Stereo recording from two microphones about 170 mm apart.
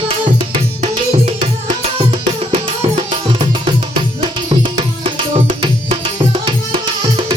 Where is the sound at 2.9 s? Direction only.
30° right (ahead or behind).